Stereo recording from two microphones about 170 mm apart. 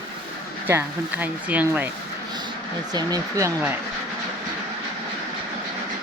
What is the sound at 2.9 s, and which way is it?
Speech, 20° right (ahead or behind).